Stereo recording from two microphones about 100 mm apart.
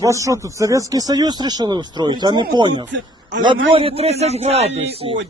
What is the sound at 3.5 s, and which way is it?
A man's voice, 70° right (ahead or behind).